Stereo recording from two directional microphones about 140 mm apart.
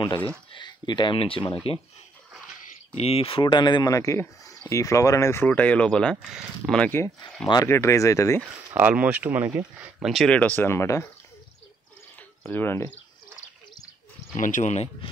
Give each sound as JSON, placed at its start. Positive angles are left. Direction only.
{"t": 0.5, "sound": "speech", "side_deg": 35}
{"t": 3.0, "sound": "speech", "side_deg": 45}
{"t": 7.6, "sound": "speech", "side_deg": 20}
{"t": 8.7, "sound": "speech", "side_deg": -10}
{"t": 9.9, "sound": "speech", "side_deg": 0}
{"t": 12.4, "sound": "speech", "side_deg": 15}
{"t": 14.3, "sound": "speech", "side_deg": 65}